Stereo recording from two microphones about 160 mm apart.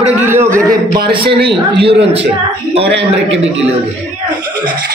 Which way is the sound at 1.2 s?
85° right.